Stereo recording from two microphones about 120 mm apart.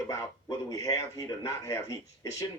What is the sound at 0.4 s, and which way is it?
Speech, 30° left (ahead or behind).